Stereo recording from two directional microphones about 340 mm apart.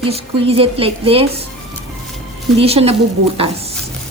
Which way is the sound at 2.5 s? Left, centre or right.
Centre.